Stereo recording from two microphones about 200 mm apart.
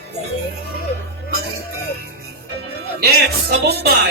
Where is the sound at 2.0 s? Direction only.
50° right (ahead or behind).